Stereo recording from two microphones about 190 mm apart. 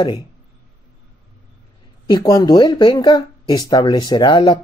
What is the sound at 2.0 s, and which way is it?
Speech, 20° left (ahead or behind).